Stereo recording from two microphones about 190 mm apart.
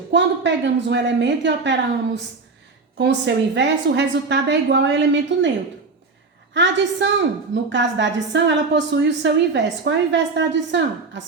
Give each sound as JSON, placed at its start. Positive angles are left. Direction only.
{"t": 0.1, "sound": "a woman's voice", "side_deg": -70}
{"t": 3.0, "sound": "a woman's voice", "side_deg": -65}
{"t": 6.5, "sound": "a woman's voice", "side_deg": -70}